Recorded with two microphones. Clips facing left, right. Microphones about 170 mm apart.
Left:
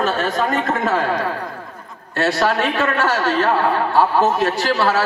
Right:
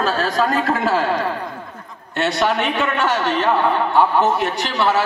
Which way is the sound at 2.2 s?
20° right (ahead or behind).